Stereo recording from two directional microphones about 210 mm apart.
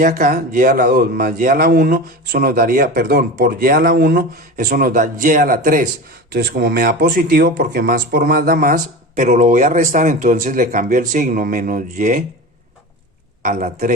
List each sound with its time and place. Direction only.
0.0 s speech: 45° right (ahead or behind)
13.4 s speech: 40° right (ahead or behind)